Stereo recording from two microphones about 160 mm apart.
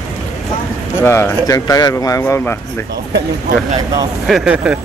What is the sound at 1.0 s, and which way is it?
Speech, 15° left (ahead or behind).